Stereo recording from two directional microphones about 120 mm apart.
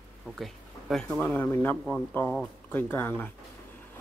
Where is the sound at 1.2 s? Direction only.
15° left (ahead or behind).